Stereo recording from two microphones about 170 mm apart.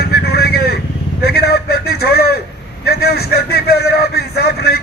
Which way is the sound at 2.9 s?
65° left (ahead or behind).